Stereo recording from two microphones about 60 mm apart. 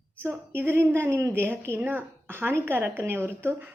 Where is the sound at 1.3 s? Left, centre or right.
Right.